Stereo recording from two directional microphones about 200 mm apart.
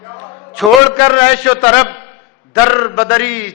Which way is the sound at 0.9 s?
15° left (ahead or behind).